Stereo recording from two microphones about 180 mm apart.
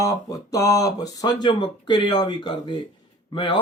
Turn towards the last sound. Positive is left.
turn(degrees=25)  # may be behind; listen again after turning